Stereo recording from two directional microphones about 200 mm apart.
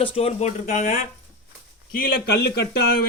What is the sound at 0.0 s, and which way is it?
Speech, 30° left (ahead or behind).